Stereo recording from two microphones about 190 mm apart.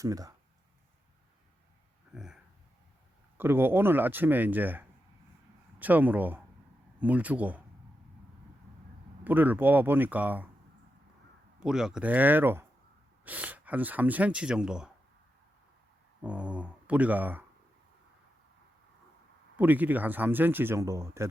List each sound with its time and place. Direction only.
0.0 s speech: 20° right (ahead or behind)
2.1 s a sound: 5° right (ahead or behind)
3.3 s speech: 10° right (ahead or behind)
9.2 s speech: 10° right (ahead or behind)
11.6 s speech: 5° right (ahead or behind)
16.2 s speech: 5° right (ahead or behind)
19.5 s speech: 10° right (ahead or behind)